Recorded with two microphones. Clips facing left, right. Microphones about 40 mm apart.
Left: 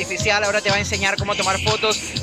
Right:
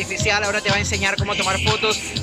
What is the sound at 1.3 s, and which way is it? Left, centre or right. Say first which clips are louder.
Speech: even; centre.